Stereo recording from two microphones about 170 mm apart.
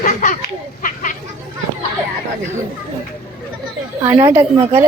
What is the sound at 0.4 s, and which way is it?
Speech, 50° left (ahead or behind).